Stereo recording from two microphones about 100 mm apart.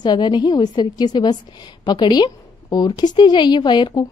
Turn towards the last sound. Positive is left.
turn(degrees=50)  # may be behind; listen again after turning